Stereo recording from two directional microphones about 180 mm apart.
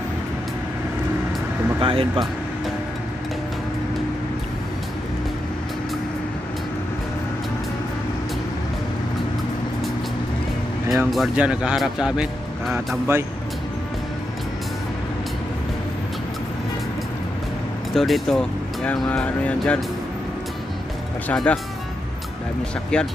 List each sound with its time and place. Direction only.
1.8 s speech: 30° right (ahead or behind)
10.9 s speech: centre (ahead or behind)
17.9 s speech: centre (ahead or behind)
21.3 s speech: 5° left (ahead or behind)
22.9 s speech: 5° left (ahead or behind)